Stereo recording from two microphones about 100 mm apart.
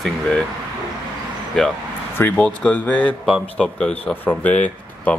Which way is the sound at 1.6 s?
5° left (ahead or behind).